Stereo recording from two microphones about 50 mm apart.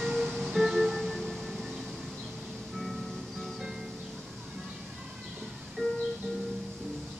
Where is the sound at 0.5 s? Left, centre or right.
Centre.